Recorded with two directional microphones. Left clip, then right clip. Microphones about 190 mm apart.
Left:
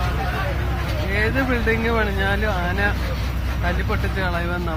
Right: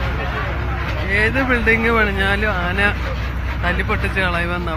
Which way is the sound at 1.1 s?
15° right (ahead or behind).